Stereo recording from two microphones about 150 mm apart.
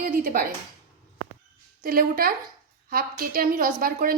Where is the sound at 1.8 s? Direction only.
75° right (ahead or behind).